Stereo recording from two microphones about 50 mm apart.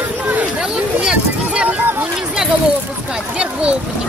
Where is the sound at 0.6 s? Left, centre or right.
Centre.